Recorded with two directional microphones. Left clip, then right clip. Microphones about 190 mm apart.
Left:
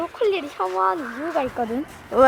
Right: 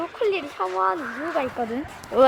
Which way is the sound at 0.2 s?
30° left (ahead or behind).